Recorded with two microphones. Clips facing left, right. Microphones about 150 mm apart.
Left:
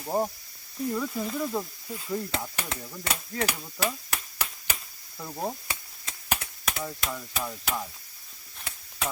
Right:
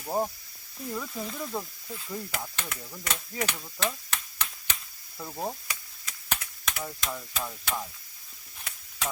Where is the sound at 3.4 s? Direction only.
10° left (ahead or behind).